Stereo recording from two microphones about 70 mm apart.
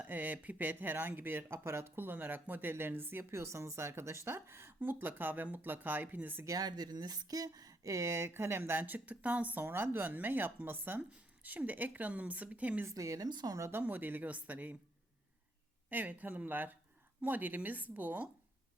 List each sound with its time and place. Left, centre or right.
0.0 s speech: right
6.6 s speech: right
12.9 s a woman's voice: right
13.2 s speech: right
13.6 s speech: right
15.9 s speech: right